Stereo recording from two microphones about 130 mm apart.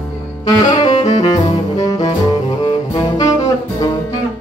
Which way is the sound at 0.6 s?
35° left (ahead or behind).